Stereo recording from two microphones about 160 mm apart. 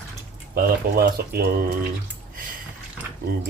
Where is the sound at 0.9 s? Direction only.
70° right (ahead or behind).